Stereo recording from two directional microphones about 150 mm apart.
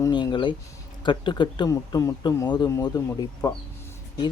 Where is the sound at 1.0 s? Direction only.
30° left (ahead or behind).